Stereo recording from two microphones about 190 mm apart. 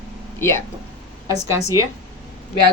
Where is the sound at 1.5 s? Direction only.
15° right (ahead or behind).